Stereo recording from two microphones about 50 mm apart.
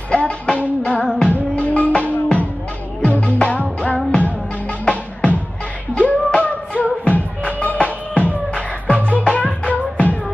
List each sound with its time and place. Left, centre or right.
0.1 s music: left